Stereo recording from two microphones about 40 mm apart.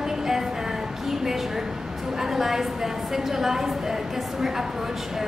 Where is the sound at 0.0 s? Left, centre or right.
Centre.